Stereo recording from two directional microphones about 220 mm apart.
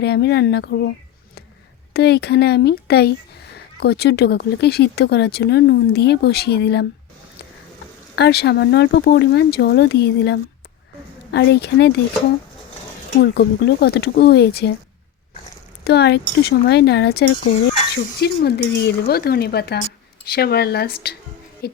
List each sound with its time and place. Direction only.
0.0 s speech: 50° left (ahead or behind)
8.1 s speech: 50° left (ahead or behind)
13.1 s speech: 50° left (ahead or behind)
15.8 s speech: 50° left (ahead or behind)